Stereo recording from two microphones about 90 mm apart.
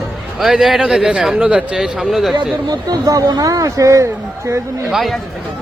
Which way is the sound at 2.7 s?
50° right (ahead or behind).